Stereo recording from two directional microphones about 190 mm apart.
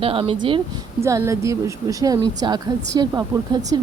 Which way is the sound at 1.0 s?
15° right (ahead or behind).